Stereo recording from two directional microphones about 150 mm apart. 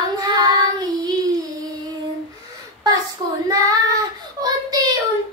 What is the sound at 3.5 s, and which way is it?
Child singing, 25° right (ahead or behind).